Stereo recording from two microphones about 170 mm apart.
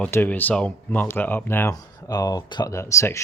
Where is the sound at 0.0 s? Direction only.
10° left (ahead or behind).